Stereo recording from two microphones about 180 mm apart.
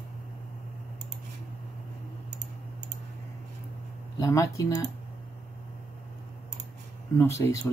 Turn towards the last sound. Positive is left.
turn(degrees=15)  # may be behind; listen again after turning